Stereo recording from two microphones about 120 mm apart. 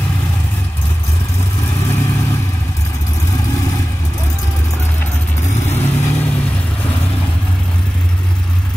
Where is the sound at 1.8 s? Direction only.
20° left (ahead or behind).